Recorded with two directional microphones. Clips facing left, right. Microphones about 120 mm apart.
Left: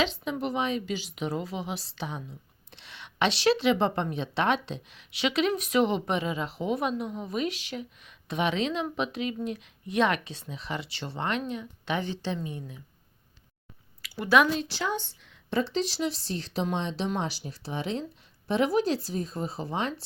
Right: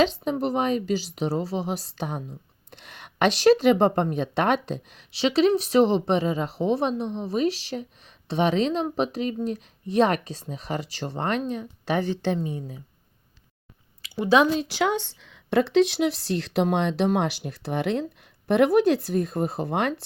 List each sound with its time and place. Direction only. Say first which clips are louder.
0.0 s speech: right 6 dB; 40° right (ahead or behind)
14.0 s speech: right 3 dB; 20° right (ahead or behind)
14.8 s speech: right 7 dB; 75° right (ahead or behind)